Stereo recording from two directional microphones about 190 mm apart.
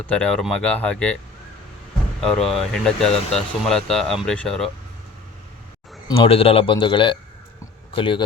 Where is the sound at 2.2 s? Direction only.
5° left (ahead or behind).